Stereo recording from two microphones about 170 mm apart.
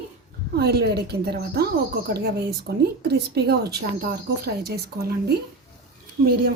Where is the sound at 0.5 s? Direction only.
70° right (ahead or behind).